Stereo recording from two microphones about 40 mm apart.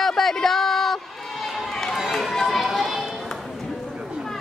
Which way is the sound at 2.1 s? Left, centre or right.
Centre.